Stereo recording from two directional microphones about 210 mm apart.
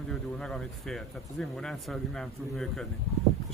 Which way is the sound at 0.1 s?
Centre (ahead or behind).